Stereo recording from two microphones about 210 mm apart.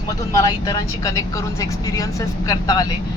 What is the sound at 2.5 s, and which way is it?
Speech, 15° left (ahead or behind).